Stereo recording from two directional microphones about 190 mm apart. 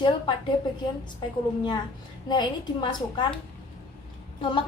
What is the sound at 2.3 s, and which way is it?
Speech, 25° left (ahead or behind).